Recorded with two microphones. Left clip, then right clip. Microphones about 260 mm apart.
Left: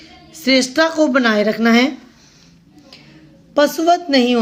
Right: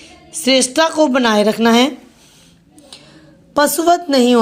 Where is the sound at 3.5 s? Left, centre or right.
Centre.